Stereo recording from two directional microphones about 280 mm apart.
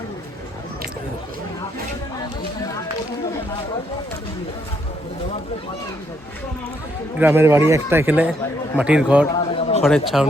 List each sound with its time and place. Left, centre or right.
7.2 s speech: centre
9.3 s a sound: centre
9.8 s speech: centre